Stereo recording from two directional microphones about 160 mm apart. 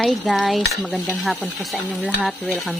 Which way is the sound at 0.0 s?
Centre (ahead or behind).